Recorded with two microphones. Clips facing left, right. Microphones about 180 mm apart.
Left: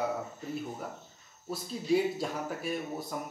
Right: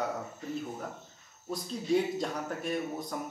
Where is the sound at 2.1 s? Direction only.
5° left (ahead or behind).